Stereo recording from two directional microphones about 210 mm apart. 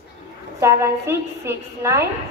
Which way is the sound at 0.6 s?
15° right (ahead or behind).